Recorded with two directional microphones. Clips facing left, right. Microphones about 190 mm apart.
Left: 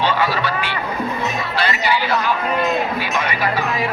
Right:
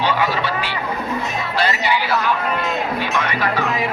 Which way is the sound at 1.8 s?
20° right (ahead or behind).